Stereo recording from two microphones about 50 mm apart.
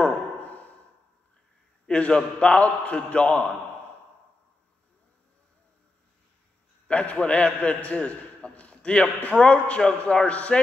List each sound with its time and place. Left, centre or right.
0.0 s a sound: left
1.9 s a man's voice: centre
6.9 s a man's voice: left